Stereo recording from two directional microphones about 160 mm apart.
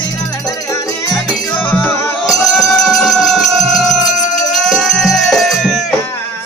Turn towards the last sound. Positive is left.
turn(degrees=0)  # may be behind; listen again after turning